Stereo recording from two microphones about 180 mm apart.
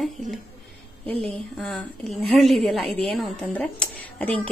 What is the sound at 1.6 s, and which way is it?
A woman's voice, centre (ahead or behind).